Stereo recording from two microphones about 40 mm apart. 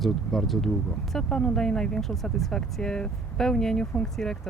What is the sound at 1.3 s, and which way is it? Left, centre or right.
Speech, centre.